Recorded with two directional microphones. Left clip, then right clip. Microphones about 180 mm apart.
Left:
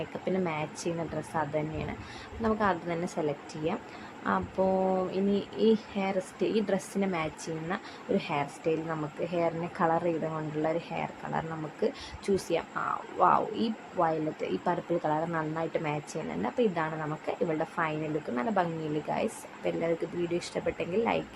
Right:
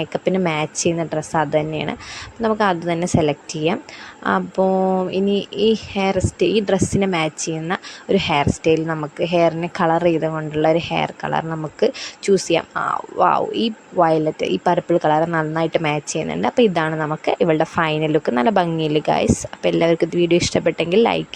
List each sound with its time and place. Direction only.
0.0 s speech: 45° right (ahead or behind)